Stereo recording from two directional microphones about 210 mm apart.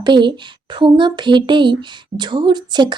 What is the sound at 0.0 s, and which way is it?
Speech, 20° right (ahead or behind).